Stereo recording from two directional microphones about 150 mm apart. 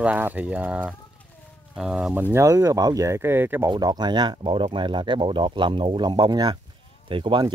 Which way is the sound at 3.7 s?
30° right (ahead or behind).